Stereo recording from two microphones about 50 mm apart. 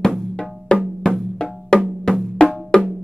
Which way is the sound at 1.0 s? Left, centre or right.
Centre.